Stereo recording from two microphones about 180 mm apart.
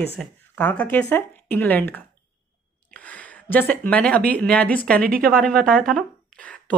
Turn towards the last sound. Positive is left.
turn(degrees=5)  # may be behind; listen again after turning